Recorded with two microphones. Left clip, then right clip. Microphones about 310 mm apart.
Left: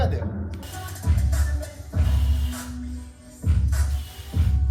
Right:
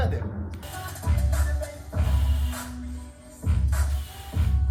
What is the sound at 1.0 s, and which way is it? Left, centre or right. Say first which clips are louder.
Music: left 1 dB; right.